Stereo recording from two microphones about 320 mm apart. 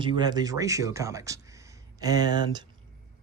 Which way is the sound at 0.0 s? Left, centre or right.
Centre.